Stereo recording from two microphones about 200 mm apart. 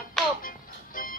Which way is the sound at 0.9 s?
45° left (ahead or behind).